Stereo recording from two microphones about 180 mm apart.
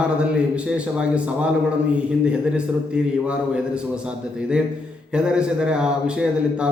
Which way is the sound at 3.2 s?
5° right (ahead or behind).